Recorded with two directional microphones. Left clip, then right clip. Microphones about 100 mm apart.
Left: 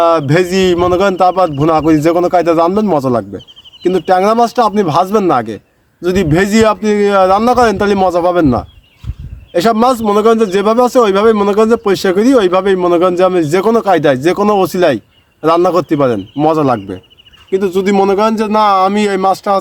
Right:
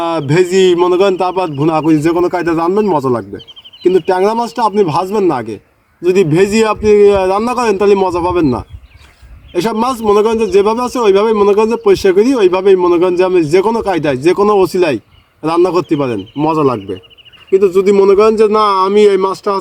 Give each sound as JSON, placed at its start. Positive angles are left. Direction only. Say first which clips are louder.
{"t": 0.2, "sound": "a man's voice", "louder": "right 1 dB", "side_deg": 15}
{"t": 18.5, "sound": "speech", "louder": "even", "side_deg": 40}